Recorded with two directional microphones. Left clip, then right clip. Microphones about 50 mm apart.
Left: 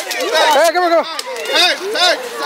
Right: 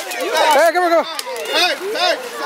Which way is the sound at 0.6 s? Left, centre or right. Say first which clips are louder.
Left 1 dB; right.